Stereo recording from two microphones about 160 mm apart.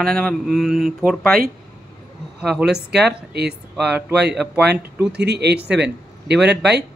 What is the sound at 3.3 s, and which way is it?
Speech, 90° right.